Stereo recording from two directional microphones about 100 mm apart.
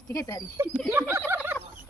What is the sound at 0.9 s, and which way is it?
Turkey, 25° right (ahead or behind).